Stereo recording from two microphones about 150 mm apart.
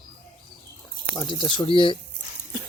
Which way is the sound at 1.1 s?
30° left (ahead or behind).